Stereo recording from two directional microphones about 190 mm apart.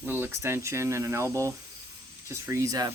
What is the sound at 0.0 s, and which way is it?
Speech, 10° right (ahead or behind).